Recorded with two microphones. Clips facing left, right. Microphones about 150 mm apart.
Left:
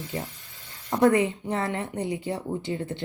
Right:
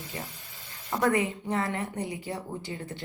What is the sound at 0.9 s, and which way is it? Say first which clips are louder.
A woman's voice: left 5 dB; 25° left (ahead or behind).